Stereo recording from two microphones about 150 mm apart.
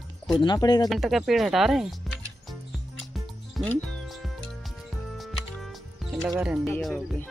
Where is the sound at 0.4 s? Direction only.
30° left (ahead or behind).